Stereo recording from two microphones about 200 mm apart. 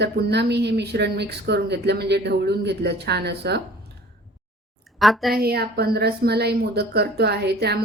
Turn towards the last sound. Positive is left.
turn(degrees=-55)  # may be behind; listen again after turning